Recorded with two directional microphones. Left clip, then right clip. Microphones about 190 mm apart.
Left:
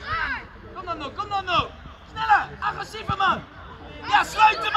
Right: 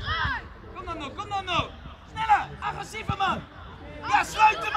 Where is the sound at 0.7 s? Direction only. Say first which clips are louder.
Left 4 dB; 45° right (ahead or behind).